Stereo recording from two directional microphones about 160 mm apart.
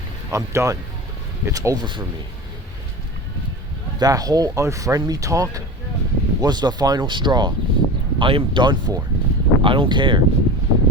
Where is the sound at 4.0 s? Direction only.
25° right (ahead or behind).